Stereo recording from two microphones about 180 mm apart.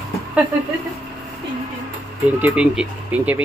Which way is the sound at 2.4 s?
10° right (ahead or behind).